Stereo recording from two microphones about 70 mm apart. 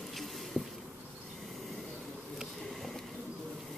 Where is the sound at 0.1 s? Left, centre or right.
Centre.